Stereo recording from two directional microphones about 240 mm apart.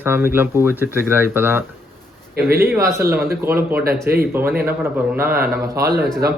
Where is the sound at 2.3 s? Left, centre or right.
Right.